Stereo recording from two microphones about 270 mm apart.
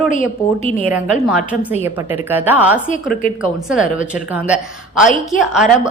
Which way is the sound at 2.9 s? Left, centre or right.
Left.